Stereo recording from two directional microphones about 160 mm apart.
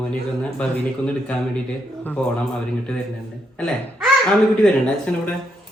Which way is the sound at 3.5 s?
5° left (ahead or behind).